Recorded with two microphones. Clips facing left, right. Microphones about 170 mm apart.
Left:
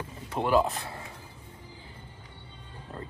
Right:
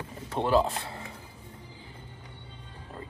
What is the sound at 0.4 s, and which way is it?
Speech, 30° right (ahead or behind).